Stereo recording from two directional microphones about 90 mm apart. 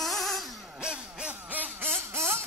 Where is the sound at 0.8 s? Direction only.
10° right (ahead or behind); by 2.4 s 30° right (ahead or behind).